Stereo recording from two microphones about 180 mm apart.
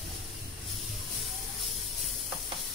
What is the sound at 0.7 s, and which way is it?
Music, centre (ahead or behind).